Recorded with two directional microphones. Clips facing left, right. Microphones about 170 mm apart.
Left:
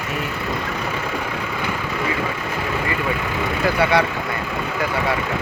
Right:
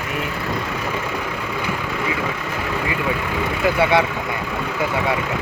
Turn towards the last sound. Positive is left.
turn(degrees=-20)  # may be behind; listen again after turning